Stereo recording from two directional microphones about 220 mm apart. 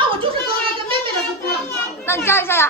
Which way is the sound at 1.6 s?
10° left (ahead or behind).